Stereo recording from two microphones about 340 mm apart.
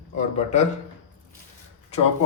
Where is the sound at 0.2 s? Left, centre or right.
Centre.